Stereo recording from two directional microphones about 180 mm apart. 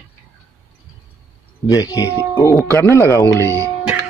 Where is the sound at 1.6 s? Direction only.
20° left (ahead or behind).